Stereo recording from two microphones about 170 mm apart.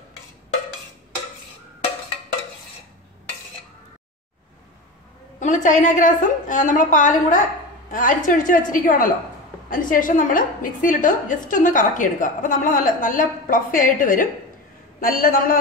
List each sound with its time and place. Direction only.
5.4 s a woman's voice: 45° left (ahead or behind)